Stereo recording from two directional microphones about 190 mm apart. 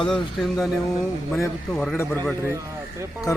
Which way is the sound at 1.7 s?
Centre (ahead or behind).